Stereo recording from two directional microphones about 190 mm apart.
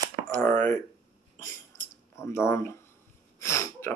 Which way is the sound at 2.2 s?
15° left (ahead or behind).